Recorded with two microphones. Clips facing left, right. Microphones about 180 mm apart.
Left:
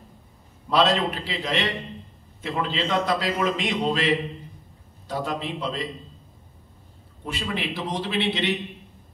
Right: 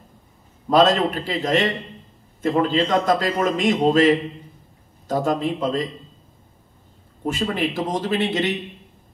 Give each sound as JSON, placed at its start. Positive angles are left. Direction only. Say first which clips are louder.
{"t": 0.7, "sound": "a man's voice", "louder": "right 5 dB", "side_deg": -45}
{"t": 7.2, "sound": "a man's voice", "louder": "right 7 dB", "side_deg": -45}